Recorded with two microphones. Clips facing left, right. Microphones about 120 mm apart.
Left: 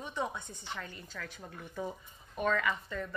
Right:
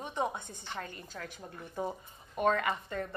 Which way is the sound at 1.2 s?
35° right (ahead or behind).